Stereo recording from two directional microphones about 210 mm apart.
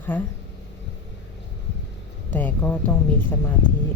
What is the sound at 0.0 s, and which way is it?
Speech, 10° left (ahead or behind).